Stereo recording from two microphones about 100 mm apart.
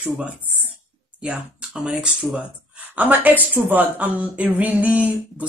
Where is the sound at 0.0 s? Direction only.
15° right (ahead or behind).